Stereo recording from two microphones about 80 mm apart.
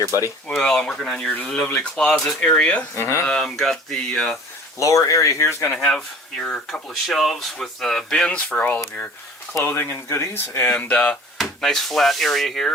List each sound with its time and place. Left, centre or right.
0.0 s speech: right
0.5 s speech: centre
2.9 s speech: left
3.2 s speech: centre
4.8 s speech: left
5.7 s speech: centre
6.8 s speech: centre
9.6 s speech: left
10.7 s speech: centre